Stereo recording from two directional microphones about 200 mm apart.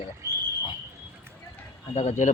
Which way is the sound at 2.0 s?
35° left (ahead or behind).